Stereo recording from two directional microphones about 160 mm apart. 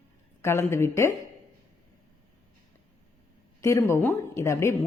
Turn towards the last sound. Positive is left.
turn(degrees=20)  # may be behind; listen again after turning